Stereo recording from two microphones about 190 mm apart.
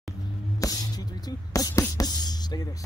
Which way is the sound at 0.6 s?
20° left (ahead or behind).